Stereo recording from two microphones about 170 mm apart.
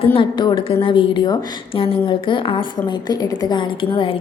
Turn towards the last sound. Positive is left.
turn(degrees=30)  # may be behind; listen again after turning